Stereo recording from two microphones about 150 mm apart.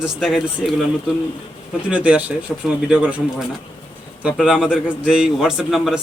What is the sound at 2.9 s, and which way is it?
Speech, 10° right (ahead or behind).